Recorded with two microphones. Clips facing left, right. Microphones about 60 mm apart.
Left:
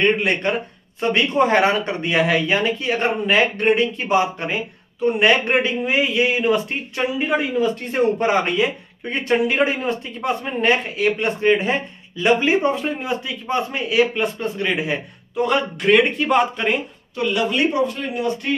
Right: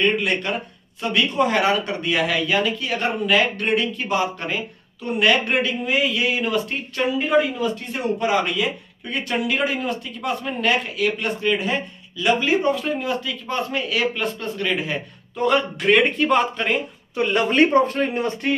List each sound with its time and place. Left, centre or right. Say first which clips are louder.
0.0 s speech: left 2 dB; left
7.9 s speech: left 4 dB; left; by 15.0 s centre
15.3 s speech: even; centre
17.3 s speech: right 3 dB; right